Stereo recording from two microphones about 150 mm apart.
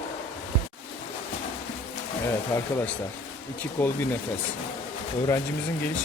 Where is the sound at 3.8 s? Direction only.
10° left (ahead or behind).